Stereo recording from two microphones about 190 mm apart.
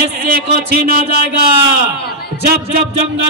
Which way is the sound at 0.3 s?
50° right (ahead or behind).